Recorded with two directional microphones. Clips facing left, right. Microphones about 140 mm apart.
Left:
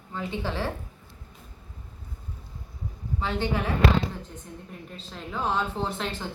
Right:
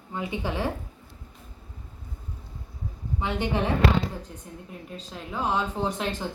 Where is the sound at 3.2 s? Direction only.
20° right (ahead or behind).